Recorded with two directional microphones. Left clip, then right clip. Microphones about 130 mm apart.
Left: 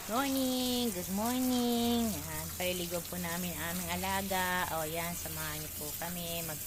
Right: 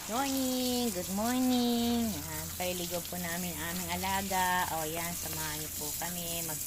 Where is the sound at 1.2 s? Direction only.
25° right (ahead or behind).